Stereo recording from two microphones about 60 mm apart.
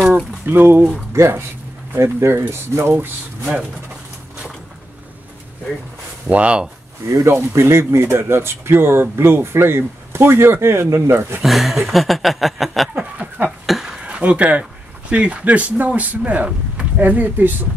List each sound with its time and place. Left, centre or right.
0.5 s speech: right
1.1 s speech: right
2.7 s speech: right
6.2 s speech: right
7.2 s speech: right
11.4 s speech: centre
12.9 s a sound: right
13.7 s a sound: centre
14.0 s speech: right